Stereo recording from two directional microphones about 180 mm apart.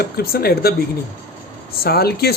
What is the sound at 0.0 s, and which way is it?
Speech, 60° left (ahead or behind).